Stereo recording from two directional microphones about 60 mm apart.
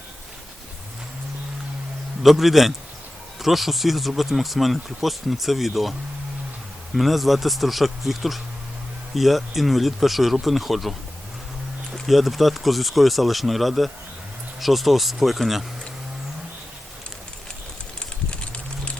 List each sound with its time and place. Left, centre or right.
2.2 s speech: centre
6.9 s speech: centre
12.0 s speech: centre
18.3 s a sound: centre